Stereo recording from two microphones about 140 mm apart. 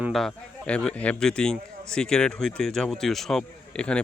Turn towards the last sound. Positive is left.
turn(degrees=5)  # may be behind; listen again after turning